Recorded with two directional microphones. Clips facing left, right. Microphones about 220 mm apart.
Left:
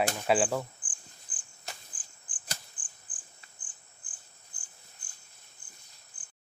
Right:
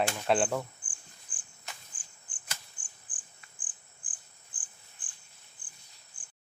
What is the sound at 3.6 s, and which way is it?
Cricket, 90° right.